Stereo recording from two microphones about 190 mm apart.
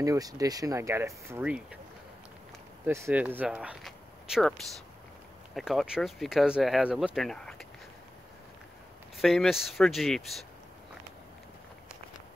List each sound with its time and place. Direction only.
0.0 s speech: 20° right (ahead or behind)
2.9 s speech: 10° right (ahead or behind)
9.1 s speech: centre (ahead or behind)